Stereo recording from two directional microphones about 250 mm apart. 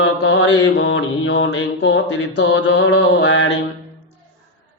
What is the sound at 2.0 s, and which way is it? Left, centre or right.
Mantra, left.